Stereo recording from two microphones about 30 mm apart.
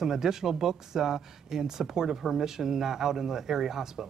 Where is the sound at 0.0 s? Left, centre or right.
Centre.